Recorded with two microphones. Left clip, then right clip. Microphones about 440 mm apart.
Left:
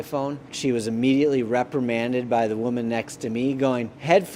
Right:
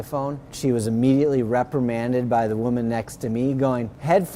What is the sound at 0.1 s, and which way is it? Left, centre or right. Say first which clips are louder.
Speech: right 1 dB; right.